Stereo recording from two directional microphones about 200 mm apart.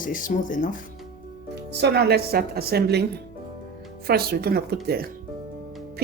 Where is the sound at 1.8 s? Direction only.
55° right (ahead or behind).